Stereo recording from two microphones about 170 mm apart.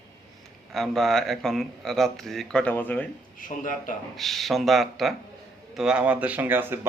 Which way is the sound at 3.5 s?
50° left (ahead or behind).